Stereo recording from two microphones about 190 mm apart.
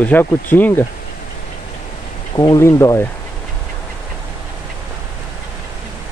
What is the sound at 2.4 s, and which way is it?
Speech, 15° left (ahead or behind).